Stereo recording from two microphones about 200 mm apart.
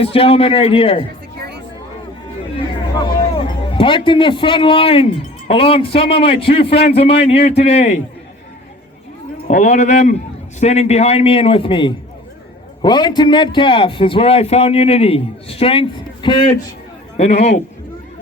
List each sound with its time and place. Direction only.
0.0 s a man's voice: 30° left (ahead or behind)
3.3 s a man's voice: 25° left (ahead or behind)
9.5 s a man's voice: 35° left (ahead or behind)